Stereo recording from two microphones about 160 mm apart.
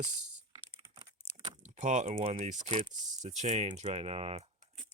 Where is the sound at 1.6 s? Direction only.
50° right (ahead or behind).